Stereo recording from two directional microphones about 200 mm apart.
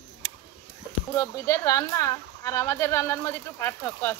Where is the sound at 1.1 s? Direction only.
15° left (ahead or behind).